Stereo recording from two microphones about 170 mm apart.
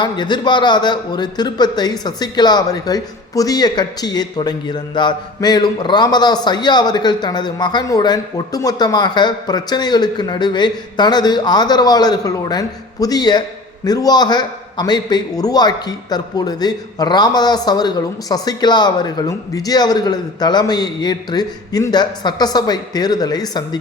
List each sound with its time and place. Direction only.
0.0 s a man's voice: 25° left (ahead or behind)